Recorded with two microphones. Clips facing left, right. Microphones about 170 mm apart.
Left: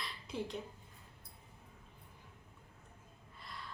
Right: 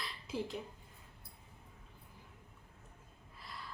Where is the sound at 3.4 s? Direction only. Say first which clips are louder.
Even; centre (ahead or behind).